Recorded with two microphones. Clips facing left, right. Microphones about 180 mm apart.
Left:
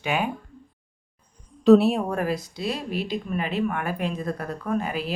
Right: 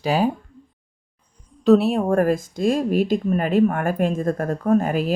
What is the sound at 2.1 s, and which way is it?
Speech, 50° right (ahead or behind).